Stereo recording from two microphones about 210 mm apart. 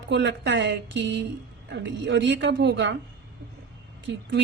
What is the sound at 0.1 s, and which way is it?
A woman's voice, 55° right (ahead or behind).